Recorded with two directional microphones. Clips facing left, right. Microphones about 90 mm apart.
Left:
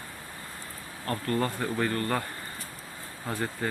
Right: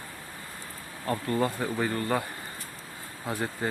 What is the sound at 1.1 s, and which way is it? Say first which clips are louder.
Speech: right 1 dB; 10° right (ahead or behind).